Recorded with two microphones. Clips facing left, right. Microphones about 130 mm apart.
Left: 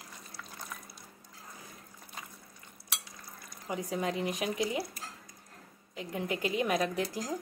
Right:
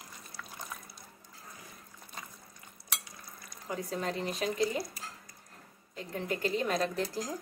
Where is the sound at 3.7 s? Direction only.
15° left (ahead or behind).